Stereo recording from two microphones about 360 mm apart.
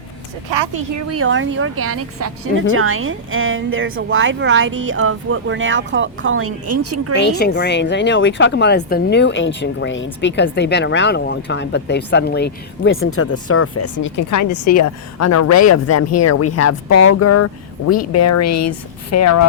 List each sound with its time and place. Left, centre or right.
0.6 s speech: right
0.9 s speech: right
7.2 s speech: left